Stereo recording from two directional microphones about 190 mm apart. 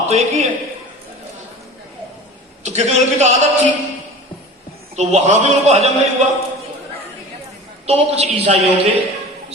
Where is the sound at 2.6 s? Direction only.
35° right (ahead or behind).